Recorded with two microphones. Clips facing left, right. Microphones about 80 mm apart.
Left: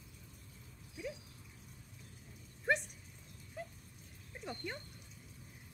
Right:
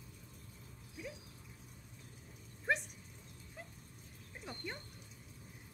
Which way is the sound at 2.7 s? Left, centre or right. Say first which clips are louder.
Left 2 dB; centre.